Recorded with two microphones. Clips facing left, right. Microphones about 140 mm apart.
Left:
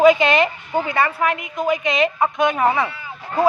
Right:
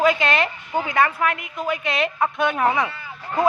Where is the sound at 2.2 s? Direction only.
15° left (ahead or behind).